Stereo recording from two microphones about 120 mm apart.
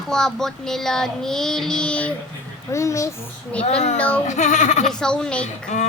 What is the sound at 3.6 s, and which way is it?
Speech, 75° left (ahead or behind).